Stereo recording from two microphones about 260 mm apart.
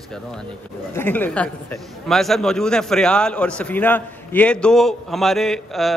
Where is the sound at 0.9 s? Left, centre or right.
Centre.